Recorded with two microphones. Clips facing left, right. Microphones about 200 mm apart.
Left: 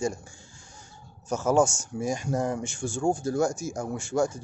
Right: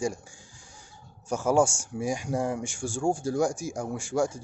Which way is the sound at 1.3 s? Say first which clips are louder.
Left 1 dB; 10° right (ahead or behind).